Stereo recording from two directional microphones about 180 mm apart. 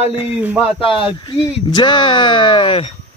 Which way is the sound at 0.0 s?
30° left (ahead or behind).